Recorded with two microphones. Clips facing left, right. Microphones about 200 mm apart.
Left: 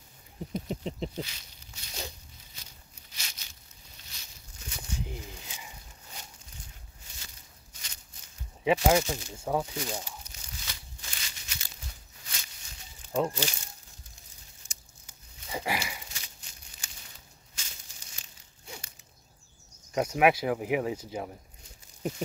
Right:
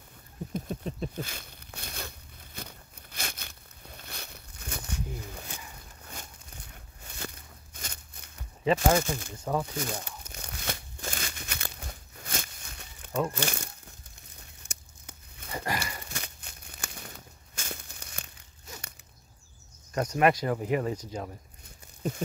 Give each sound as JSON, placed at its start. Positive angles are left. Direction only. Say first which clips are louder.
{"t": 0.5, "sound": "a sound", "louder": "left 1 dB", "side_deg": 20}
{"t": 1.2, "sound": "a sound", "louder": "right 3 dB", "side_deg": -55}
{"t": 9.0, "sound": "speech", "louder": "right 1 dB", "side_deg": -55}
{"t": 9.3, "sound": "speech", "louder": "left 2 dB", "side_deg": 10}
{"t": 10.0, "sound": "crumpling", "louder": "right 3 dB", "side_deg": -60}
{"t": 13.3, "sound": "speech", "louder": "right 2 dB", "side_deg": -55}
{"t": 14.7, "sound": "tearing", "louder": "right 8 dB", "side_deg": -60}
{"t": 15.5, "sound": "a sound", "louder": "left 1 dB", "side_deg": 10}
{"t": 15.8, "sound": "crumpling", "louder": "right 2 dB", "side_deg": -55}
{"t": 19.9, "sound": "speech", "louder": "even", "side_deg": 10}